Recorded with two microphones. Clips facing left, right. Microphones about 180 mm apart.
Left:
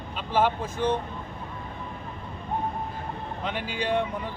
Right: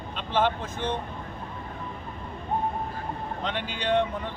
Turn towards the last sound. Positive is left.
turn(degrees=5)  # may be behind; listen again after turning